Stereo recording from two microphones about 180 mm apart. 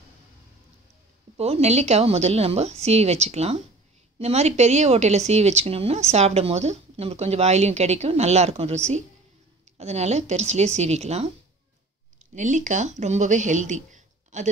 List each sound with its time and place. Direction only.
1.3 s a woman's voice: 35° right (ahead or behind)